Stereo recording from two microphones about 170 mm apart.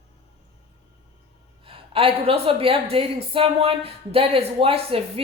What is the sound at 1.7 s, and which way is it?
A woman's voice, 35° right (ahead or behind).